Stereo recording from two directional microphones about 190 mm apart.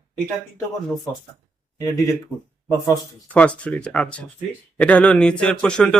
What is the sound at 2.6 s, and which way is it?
Speech, 15° left (ahead or behind).